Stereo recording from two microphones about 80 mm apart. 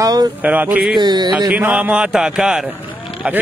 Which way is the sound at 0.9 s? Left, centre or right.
Right.